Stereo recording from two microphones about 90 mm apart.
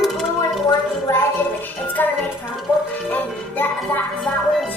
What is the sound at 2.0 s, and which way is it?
Music, 20° left (ahead or behind).